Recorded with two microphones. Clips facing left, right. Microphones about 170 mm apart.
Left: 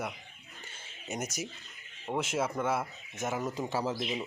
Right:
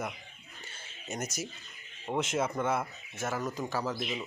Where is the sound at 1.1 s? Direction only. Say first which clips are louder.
Even; 10° left (ahead or behind).